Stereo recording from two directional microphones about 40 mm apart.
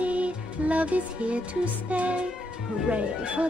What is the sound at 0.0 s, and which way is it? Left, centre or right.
Music, right.